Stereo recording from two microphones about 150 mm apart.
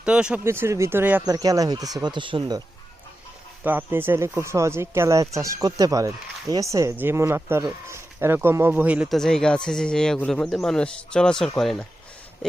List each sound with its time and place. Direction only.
0.0 s speech: 5° right (ahead or behind)
0.4 s speech: 15° right (ahead or behind)
1.2 s speech: 25° right (ahead or behind)
3.6 s speech: 10° right (ahead or behind)
9.1 s speech: 5° left (ahead or behind)